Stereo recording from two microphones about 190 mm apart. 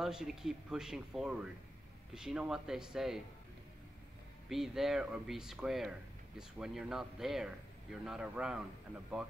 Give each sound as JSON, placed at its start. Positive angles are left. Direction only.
{"t": 0.0, "sound": "speech", "side_deg": 0}
{"t": 4.5, "sound": "speech", "side_deg": 0}